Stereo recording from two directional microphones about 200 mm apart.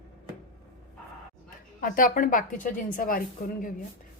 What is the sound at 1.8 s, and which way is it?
Speech, 45° left (ahead or behind).